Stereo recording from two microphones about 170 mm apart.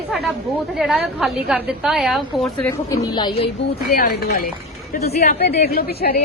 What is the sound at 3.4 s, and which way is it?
A woman's voice, 65° left (ahead or behind).